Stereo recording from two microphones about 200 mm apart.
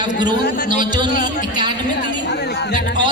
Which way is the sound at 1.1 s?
40° left (ahead or behind).